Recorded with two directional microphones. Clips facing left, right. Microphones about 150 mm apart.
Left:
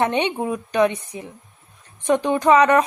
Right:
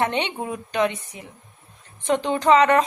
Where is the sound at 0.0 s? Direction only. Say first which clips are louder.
Left 4 dB; 15° left (ahead or behind).